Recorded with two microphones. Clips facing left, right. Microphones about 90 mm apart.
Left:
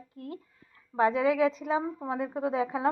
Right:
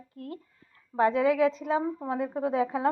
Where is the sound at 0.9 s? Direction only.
10° left (ahead or behind).